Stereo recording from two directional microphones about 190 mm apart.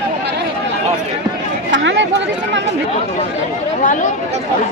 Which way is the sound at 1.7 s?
75° right (ahead or behind).